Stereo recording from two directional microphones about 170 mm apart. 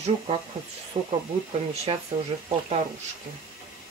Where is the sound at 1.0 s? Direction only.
40° right (ahead or behind).